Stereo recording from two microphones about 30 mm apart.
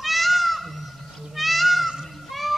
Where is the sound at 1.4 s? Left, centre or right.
Centre.